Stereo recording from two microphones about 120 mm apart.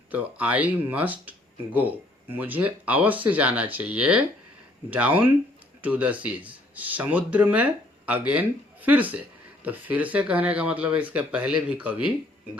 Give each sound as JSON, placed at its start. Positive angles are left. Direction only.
{"t": 0.1, "sound": "speech", "side_deg": -15}